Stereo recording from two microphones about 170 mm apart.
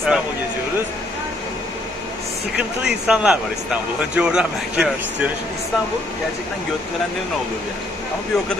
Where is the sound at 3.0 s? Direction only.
5° right (ahead or behind).